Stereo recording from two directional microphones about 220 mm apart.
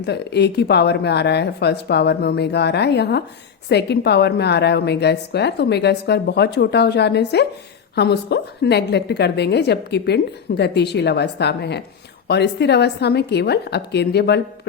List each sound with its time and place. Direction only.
0.0 s a woman's voice: 50° left (ahead or behind)